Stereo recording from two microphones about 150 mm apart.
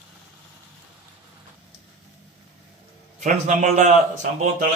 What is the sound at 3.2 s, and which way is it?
Speech, 60° right (ahead or behind).